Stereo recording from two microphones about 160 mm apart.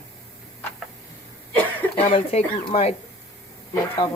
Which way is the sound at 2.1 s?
40° left (ahead or behind).